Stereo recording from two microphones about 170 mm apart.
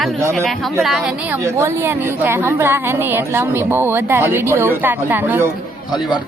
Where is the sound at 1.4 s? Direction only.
15° right (ahead or behind).